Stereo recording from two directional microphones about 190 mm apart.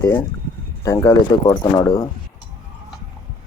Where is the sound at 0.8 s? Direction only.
15° left (ahead or behind).